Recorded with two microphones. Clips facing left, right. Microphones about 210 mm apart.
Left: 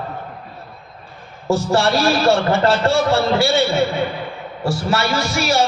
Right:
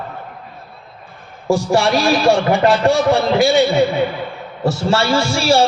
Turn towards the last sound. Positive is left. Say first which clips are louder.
# right 4 dB
turn(degrees=-30)  # may be behind; listen again after turning